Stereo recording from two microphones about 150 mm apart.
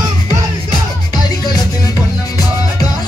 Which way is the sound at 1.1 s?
25° left (ahead or behind).